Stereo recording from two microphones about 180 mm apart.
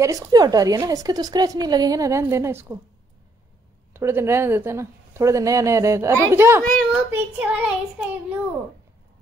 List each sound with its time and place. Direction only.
0.0 s a woman's voice: 20° right (ahead or behind)
3.9 s speech: 15° right (ahead or behind)
6.6 s a child's voice: 5° left (ahead or behind)
6.9 s speech: 10° right (ahead or behind)